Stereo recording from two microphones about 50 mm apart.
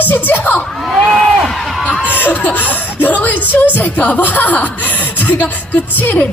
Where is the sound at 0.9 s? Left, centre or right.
Centre.